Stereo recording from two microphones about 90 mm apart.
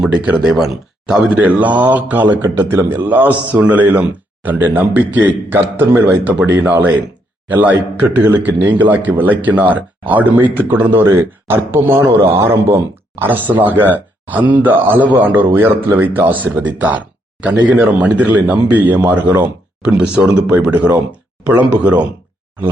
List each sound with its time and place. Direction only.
0.0 s a man's voice: 10° right (ahead or behind)